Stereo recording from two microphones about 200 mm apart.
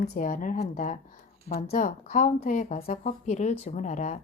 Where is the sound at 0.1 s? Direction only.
40° left (ahead or behind).